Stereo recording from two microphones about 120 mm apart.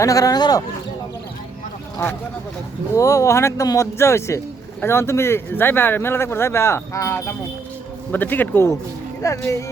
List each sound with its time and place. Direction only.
0.0 s speech: 30° left (ahead or behind)
2.9 s speech: 25° left (ahead or behind)